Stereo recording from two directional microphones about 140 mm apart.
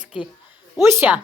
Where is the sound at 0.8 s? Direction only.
15° right (ahead or behind).